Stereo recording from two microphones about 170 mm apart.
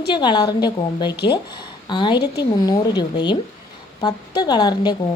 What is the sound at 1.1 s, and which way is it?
Speech, 80° left.